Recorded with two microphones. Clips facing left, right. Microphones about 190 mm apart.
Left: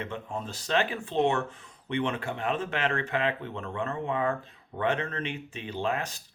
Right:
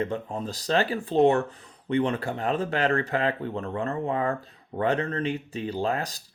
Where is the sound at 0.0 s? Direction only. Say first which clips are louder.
Right 6 dB; 35° right (ahead or behind).